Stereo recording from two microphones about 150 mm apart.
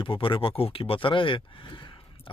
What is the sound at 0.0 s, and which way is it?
Speech, 35° left (ahead or behind).